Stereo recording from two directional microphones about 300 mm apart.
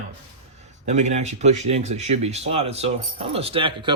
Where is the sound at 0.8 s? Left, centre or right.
Right.